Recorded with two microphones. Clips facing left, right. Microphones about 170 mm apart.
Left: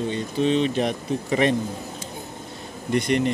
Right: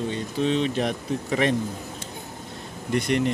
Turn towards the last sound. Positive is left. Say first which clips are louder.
# left 2 dB
turn(degrees=0)  # may be behind; listen again after turning